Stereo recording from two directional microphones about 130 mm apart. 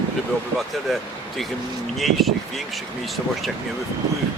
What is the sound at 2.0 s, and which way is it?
Speech, centre (ahead or behind).